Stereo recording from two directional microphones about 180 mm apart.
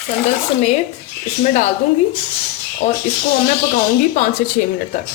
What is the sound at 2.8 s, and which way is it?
Speech, 40° left (ahead or behind).